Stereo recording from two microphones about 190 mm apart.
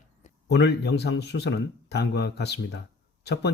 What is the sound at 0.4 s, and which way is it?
Speech, 60° left (ahead or behind).